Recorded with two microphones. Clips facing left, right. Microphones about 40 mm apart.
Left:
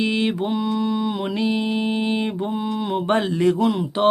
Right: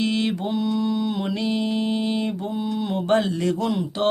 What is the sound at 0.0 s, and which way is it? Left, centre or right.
Mantra, centre.